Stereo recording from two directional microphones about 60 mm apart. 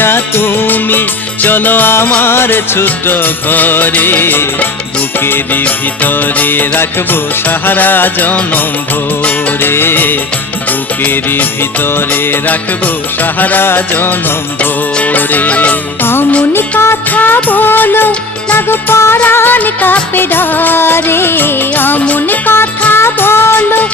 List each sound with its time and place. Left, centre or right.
0.0 s music: left
17.2 s music: left